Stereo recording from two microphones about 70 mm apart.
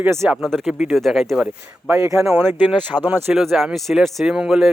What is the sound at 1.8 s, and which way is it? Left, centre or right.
Speech, right.